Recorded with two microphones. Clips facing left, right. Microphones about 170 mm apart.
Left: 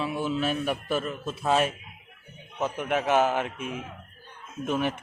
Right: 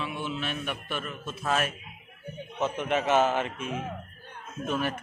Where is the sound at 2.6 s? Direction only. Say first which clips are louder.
Even; 10° left (ahead or behind).